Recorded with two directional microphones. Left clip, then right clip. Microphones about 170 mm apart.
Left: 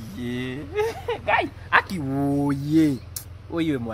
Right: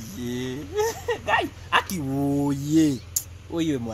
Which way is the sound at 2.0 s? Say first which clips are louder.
Left 1 dB; 10° right (ahead or behind).